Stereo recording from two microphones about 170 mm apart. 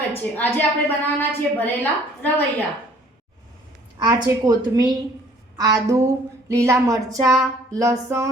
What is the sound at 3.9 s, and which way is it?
A woman's voice, 25° right (ahead or behind).